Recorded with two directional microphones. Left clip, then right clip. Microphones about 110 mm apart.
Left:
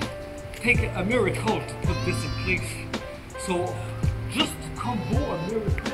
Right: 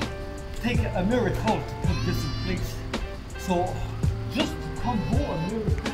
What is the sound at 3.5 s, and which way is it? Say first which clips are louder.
Music: right 1 dB; centre (ahead or behind).